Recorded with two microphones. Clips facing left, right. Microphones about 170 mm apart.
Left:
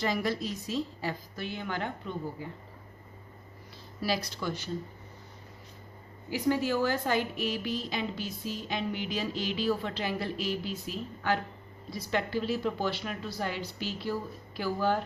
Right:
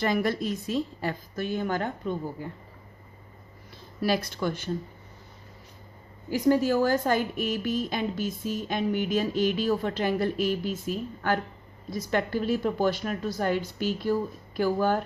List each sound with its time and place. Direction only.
0.0 s a woman's voice: 55° right (ahead or behind)
4.0 s a woman's voice: 55° right (ahead or behind)
6.3 s a woman's voice: 45° right (ahead or behind)